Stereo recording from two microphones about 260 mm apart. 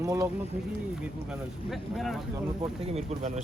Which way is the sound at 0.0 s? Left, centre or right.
Centre.